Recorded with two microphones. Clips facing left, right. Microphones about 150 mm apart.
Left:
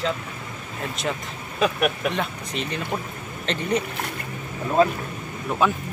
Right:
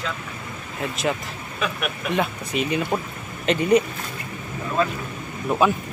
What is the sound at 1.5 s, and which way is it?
Speech, 40° left (ahead or behind).